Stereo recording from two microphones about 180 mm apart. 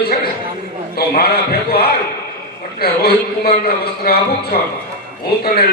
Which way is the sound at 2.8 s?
55° left (ahead or behind).